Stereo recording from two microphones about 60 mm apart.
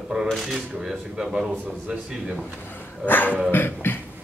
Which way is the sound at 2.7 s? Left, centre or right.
Left.